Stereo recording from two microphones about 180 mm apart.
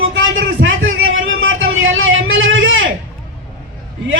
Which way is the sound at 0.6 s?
90° right.